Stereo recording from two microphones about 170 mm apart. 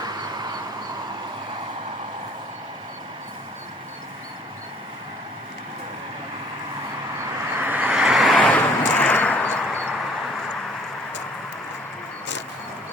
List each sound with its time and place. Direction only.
0.0 s vehicle: 25° right (ahead or behind)
7.6 s vehicle: 10° right (ahead or behind); by 9.9 s 10° left (ahead or behind)